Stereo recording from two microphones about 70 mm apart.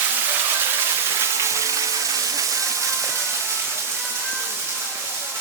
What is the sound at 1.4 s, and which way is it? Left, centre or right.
Water, right.